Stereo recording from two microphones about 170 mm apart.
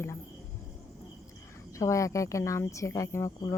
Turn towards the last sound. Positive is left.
turn(degrees=15)  # may be behind; listen again after turning